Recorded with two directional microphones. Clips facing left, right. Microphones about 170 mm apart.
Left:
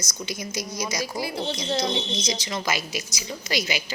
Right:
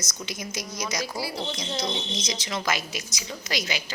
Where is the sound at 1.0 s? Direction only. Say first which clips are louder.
Left 2 dB; 20° left (ahead or behind).